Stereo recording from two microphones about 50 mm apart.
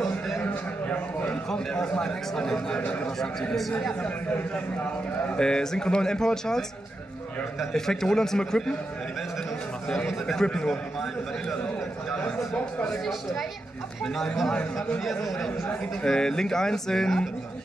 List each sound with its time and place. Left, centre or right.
0.8 s a sound: left
1.5 s a man's voice: centre
5.4 s a man's voice: centre
7.7 s a man's voice: centre
10.2 s a man's voice: centre
12.2 s a man's voice: centre
14.0 s a man's voice: centre
14.5 s speech: left
16.0 s a man's voice: centre